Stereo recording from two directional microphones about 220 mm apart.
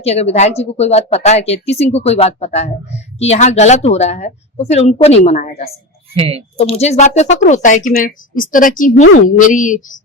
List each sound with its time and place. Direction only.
0.0 s speech: 30° left (ahead or behind)
6.1 s speech: 25° right (ahead or behind)
6.6 s speech: 30° left (ahead or behind)